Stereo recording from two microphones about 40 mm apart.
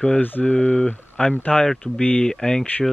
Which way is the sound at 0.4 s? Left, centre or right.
Left.